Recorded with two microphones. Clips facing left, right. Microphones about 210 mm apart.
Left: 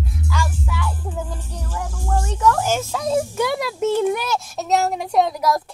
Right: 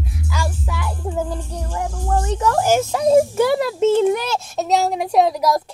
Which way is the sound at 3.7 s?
25° right (ahead or behind).